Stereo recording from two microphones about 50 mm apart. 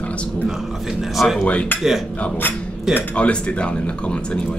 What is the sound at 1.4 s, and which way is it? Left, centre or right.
Speech, left.